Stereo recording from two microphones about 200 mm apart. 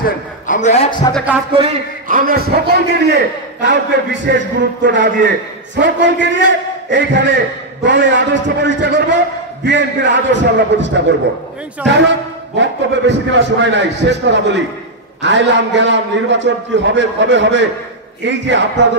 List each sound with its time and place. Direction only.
0.5 s a man's voice: 35° left (ahead or behind)
1.1 s music: 5° right (ahead or behind)
1.5 s a man's voice: 30° right (ahead or behind)
2.0 s a man's voice: 45° right (ahead or behind); by 11.1 s 65° right (ahead or behind)
12.5 s a man's voice: 65° right (ahead or behind)